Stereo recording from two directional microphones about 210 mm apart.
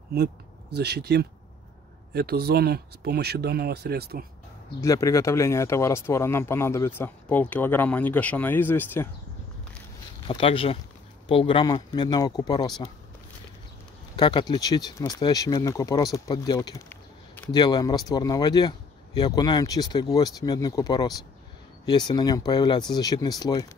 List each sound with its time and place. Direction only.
0.7 s speech: 50° right (ahead or behind)
4.7 s speech: 15° left (ahead or behind)
10.2 s speech: 25° left (ahead or behind)
14.1 s speech: 20° left (ahead or behind)